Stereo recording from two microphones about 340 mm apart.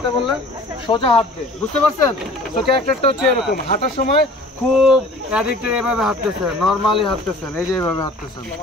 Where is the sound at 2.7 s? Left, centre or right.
Centre.